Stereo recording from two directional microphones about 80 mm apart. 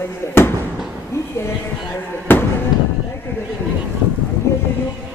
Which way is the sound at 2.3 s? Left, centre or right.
Left.